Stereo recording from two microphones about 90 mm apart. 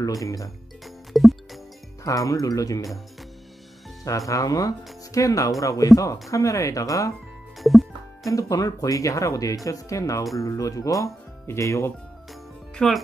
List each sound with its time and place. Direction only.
0.0 s speech: 40° left (ahead or behind)
0.8 s music: centre (ahead or behind)
2.0 s speech: 40° left (ahead or behind)
4.3 s speech: 40° left (ahead or behind)
7.5 s music: centre (ahead or behind)
8.3 s speech: 40° left (ahead or behind)
12.7 s speech: centre (ahead or behind)